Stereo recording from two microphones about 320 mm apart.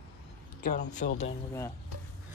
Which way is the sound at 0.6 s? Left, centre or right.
Left.